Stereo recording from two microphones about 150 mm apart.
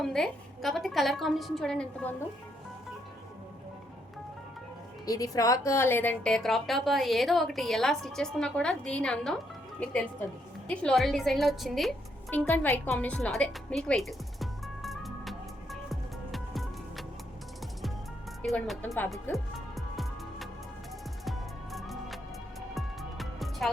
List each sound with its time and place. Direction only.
0.0 s a woman's voice: centre (ahead or behind)
5.0 s a woman's voice: 25° left (ahead or behind); by 12.5 s 5° left (ahead or behind)
12.5 s music: 10° left (ahead or behind)
18.4 s a woman's voice: centre (ahead or behind)
19.5 s music: centre (ahead or behind)